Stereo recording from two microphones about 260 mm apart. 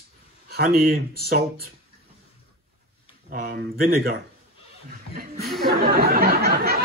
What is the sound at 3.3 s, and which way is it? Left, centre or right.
Speech, right.